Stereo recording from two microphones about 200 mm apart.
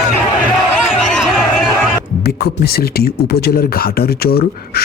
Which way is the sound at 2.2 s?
55° left (ahead or behind).